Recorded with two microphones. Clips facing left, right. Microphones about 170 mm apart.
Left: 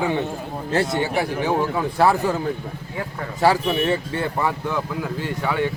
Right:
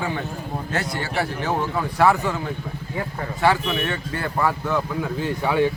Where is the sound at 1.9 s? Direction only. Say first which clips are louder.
Even; 35° left (ahead or behind).